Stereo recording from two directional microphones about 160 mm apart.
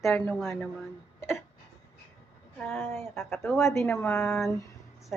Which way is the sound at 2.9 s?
15° left (ahead or behind).